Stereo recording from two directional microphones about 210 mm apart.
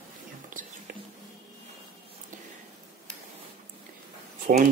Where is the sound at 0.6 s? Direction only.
40° right (ahead or behind).